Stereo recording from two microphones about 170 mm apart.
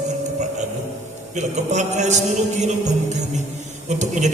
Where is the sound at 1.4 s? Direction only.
45° right (ahead or behind).